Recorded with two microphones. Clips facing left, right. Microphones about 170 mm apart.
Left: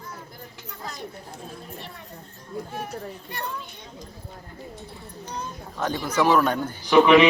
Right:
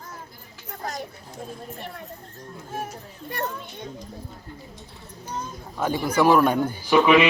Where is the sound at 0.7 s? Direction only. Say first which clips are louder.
Right 6 dB; 50° right (ahead or behind).